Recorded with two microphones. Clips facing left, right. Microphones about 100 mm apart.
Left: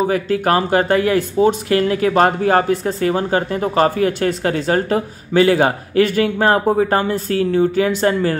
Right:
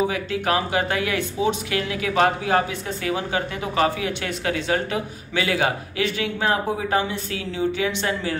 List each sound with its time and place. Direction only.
0.1 s speech: 45° left (ahead or behind)